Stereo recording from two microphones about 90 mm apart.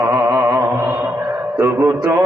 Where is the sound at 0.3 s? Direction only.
50° right (ahead or behind).